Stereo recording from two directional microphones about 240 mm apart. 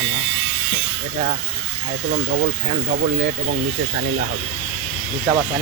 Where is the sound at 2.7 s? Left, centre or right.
Right.